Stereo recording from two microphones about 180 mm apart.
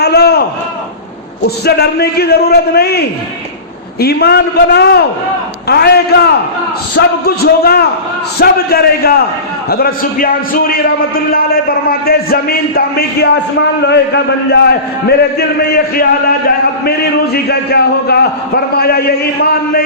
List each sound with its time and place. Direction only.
0.0 s a sound: 65° left (ahead or behind)
1.5 s a man's voice: 65° left (ahead or behind)
4.0 s a man's voice: 65° left (ahead or behind)
17.3 s a man's voice: 60° left (ahead or behind)